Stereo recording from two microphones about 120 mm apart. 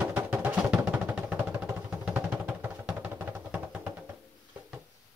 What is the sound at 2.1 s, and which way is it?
Vehicle, 15° right (ahead or behind).